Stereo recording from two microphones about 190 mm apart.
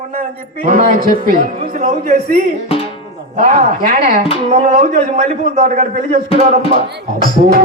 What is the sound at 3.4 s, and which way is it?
A man's voice, 40° right (ahead or behind).